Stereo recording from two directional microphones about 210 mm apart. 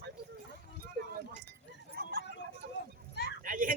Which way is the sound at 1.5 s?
50° right (ahead or behind).